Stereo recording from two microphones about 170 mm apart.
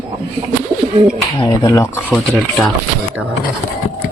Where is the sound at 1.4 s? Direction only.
20° left (ahead or behind).